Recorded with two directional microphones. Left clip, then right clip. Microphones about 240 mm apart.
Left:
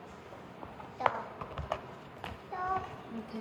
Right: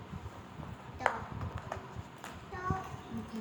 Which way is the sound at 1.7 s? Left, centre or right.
Centre.